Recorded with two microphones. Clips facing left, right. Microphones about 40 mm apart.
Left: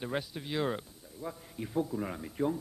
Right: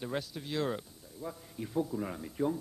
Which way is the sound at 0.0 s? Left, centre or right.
Centre.